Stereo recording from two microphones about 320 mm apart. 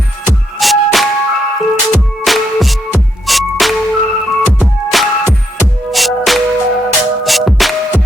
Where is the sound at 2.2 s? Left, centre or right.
Centre.